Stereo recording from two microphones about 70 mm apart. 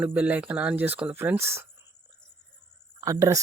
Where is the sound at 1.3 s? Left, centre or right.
Right.